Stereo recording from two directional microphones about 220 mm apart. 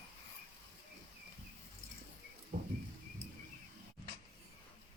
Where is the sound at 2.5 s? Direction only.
40° right (ahead or behind).